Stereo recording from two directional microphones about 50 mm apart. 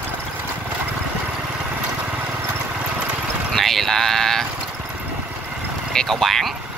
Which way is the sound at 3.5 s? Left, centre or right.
Centre.